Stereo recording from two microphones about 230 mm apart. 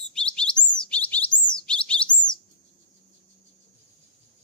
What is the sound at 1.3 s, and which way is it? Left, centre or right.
Bird, centre.